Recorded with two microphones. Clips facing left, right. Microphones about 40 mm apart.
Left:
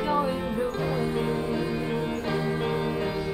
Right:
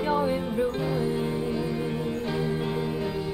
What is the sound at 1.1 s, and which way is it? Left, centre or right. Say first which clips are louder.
Music: left 1 dB; left.